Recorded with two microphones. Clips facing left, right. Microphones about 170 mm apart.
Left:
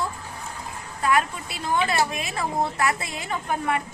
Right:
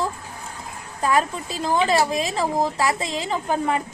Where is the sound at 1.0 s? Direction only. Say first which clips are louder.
Right 2 dB; 35° right (ahead or behind).